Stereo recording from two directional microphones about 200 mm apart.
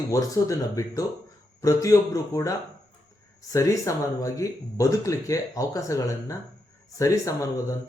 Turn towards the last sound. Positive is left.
turn(degrees=15)  # may be behind; listen again after turning